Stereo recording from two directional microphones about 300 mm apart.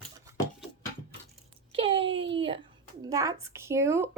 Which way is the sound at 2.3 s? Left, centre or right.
Centre.